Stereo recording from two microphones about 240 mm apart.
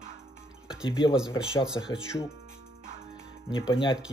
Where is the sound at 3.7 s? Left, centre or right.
Left.